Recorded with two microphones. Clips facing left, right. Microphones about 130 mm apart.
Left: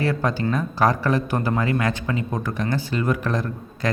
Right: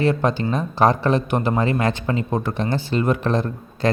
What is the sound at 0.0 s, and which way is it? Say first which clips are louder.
Speech: right 3 dB; 20° right (ahead or behind).